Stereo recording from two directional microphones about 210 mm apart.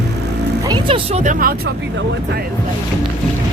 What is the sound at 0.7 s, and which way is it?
Speech, 25° right (ahead or behind).